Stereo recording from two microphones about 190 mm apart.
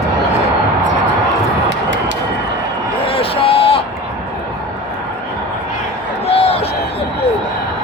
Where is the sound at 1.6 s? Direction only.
70° right (ahead or behind).